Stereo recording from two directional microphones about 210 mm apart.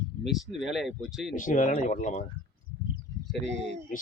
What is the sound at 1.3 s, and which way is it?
Speech, 40° left (ahead or behind).